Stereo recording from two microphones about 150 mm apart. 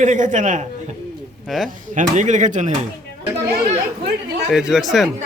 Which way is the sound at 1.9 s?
55° right (ahead or behind).